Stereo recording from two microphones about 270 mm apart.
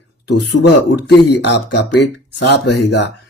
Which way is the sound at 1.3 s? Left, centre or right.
Left.